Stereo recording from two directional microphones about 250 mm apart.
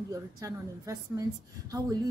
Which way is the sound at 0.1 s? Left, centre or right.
Centre.